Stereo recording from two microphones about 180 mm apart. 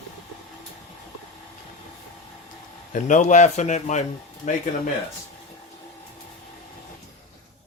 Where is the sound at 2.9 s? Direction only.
45° left (ahead or behind).